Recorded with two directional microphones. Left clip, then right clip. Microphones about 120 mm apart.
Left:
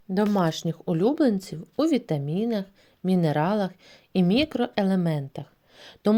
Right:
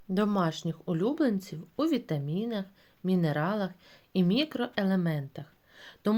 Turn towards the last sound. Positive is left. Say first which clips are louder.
# left 6 dB
turn(degrees=60)  # may be behind; listen again after turning